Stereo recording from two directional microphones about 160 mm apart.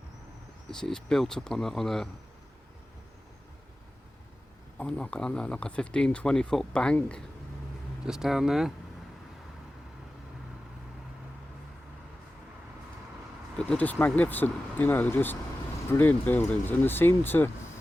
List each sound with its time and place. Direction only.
0.7 s speech: 5° left (ahead or behind)
4.8 s speech: 10° left (ahead or behind)
13.6 s speech: 10° left (ahead or behind)